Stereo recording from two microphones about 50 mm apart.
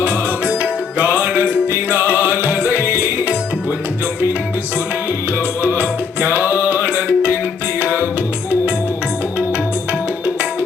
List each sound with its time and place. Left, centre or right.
0.0 s music: right
5.6 s music: right